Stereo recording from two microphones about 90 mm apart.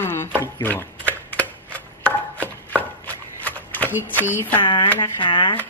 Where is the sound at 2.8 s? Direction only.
20° left (ahead or behind).